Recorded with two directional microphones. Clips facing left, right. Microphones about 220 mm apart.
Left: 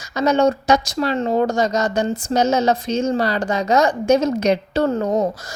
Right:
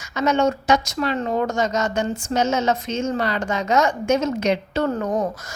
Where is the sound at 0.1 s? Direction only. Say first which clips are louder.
Left 3 dB; 35° left (ahead or behind).